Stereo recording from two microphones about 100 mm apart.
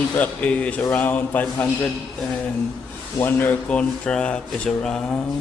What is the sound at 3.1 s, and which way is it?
A man's voice, 20° left (ahead or behind).